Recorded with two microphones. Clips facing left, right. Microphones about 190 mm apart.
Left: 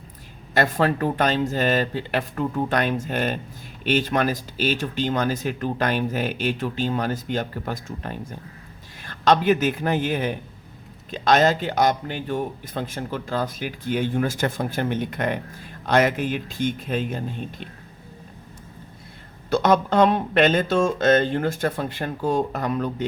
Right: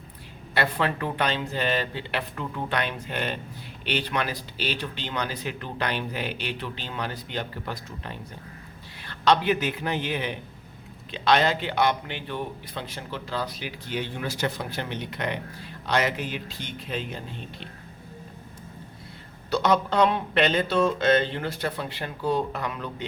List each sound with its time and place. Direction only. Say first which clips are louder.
0.5 s a man's voice: left 5 dB; 45° left (ahead or behind)
19.5 s a man's voice: left 4 dB; 50° left (ahead or behind)